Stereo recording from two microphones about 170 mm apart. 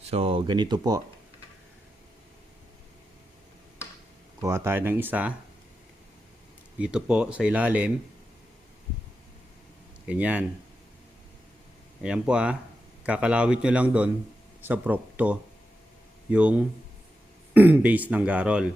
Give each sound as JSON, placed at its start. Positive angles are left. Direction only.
{"t": 0.0, "sound": "speech", "side_deg": -35}
{"t": 4.4, "sound": "speech", "side_deg": -15}
{"t": 6.7, "sound": "speech", "side_deg": -5}
{"t": 10.1, "sound": "speech", "side_deg": -10}
{"t": 12.0, "sound": "speech", "side_deg": -5}